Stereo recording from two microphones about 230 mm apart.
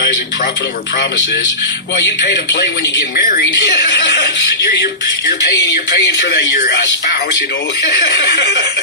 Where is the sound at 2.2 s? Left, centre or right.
Left.